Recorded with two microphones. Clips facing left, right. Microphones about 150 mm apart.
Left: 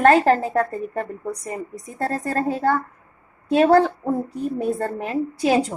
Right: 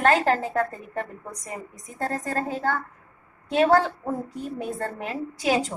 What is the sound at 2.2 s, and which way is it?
A woman's voice, 45° left (ahead or behind).